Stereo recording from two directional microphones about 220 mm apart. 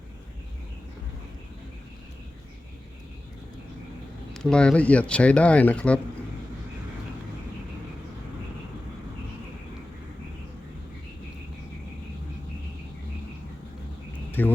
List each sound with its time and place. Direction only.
4.4 s speech: 5° left (ahead or behind)
14.4 s speech: 10° left (ahead or behind)